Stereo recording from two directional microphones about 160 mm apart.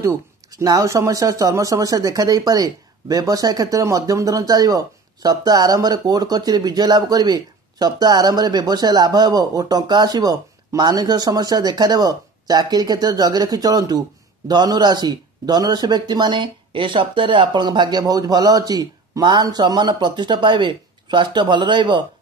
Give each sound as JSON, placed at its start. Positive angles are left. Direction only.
{"t": 0.0, "sound": "speech", "side_deg": -20}